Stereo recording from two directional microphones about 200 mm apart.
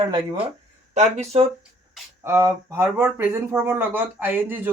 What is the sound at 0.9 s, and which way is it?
Speech, 35° right (ahead or behind).